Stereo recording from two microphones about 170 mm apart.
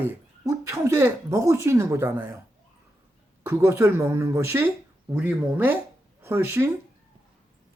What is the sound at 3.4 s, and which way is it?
Speech, 15° right (ahead or behind).